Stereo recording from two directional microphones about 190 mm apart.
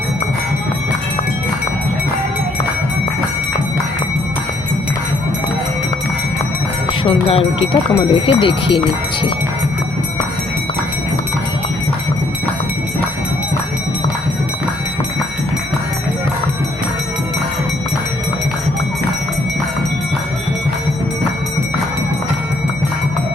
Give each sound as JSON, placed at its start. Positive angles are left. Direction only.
{"t": 7.0, "sound": "clip-clop", "side_deg": 30}
{"t": 7.7, "sound": "speech", "side_deg": 25}